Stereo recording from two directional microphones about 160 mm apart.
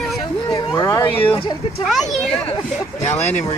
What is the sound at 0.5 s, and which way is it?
Speech, 25° left (ahead or behind).